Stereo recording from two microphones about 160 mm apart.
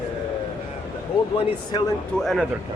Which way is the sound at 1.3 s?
25° left (ahead or behind).